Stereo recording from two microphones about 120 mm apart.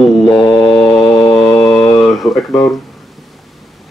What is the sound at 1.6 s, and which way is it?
Mantra, 5° left (ahead or behind).